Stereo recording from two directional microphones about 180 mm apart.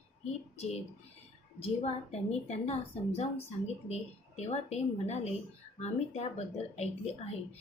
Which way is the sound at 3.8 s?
35° left (ahead or behind).